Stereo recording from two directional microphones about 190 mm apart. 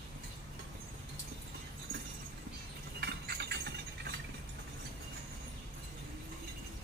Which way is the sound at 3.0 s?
60° right (ahead or behind).